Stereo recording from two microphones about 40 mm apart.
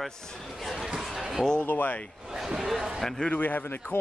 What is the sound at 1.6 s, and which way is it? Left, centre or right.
Speech, left.